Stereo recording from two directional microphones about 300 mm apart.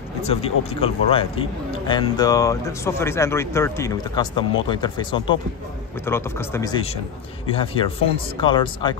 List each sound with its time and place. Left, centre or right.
0.2 s speech: centre